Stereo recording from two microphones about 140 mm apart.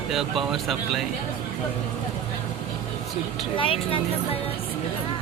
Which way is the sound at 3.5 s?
40° left (ahead or behind).